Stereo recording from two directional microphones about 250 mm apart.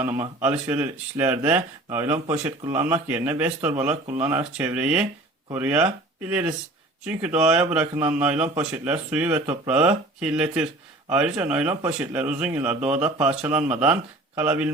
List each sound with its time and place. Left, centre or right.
0.0 s speech: centre
2.1 s speech: right
2.4 s speech: centre